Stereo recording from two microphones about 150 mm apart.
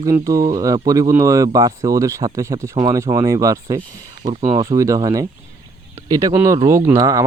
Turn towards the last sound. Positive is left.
turn(degrees=-20)  # may be behind; listen again after turning